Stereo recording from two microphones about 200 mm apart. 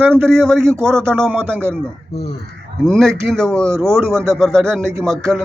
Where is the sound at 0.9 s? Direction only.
5° left (ahead or behind).